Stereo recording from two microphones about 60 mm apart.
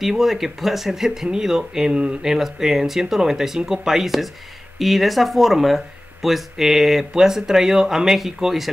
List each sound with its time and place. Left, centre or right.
0.0 s speech: centre
2.3 s speech: centre